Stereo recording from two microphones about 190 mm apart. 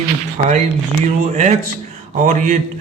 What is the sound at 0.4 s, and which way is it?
A man's voice, 40° right (ahead or behind).